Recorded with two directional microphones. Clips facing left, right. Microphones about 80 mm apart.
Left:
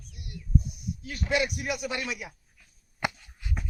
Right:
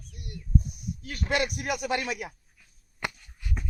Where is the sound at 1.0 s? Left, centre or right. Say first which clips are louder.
Even; right.